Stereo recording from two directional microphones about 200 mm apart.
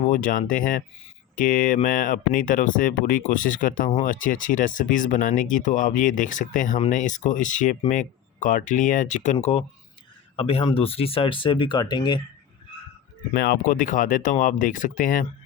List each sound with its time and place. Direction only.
0.0 s speech: 40° left (ahead or behind); by 12.2 s 20° left (ahead or behind)
13.3 s speech: 55° left (ahead or behind)